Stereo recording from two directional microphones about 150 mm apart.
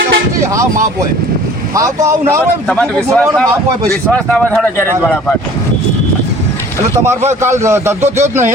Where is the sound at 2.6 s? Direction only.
5° left (ahead or behind).